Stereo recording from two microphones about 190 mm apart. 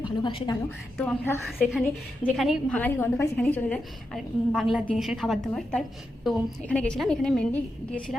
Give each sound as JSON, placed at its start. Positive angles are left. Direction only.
{"t": 0.0, "sound": "a woman's voice", "side_deg": 25}
{"t": 0.9, "sound": "a woman's voice", "side_deg": 10}